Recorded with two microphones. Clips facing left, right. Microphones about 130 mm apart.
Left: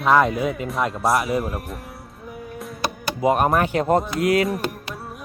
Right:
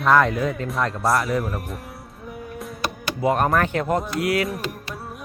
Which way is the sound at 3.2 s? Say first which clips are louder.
Left 1 dB; 20° left (ahead or behind).